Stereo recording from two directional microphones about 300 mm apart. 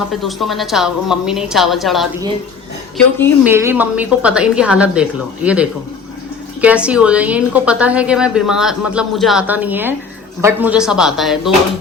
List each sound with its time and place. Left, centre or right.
0.1 s a woman's voice: centre
3.4 s a woman's voice: centre